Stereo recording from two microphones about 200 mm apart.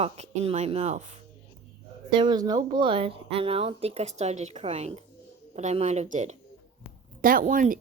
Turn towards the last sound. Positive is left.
turn(degrees=-40)  # may be behind; listen again after turning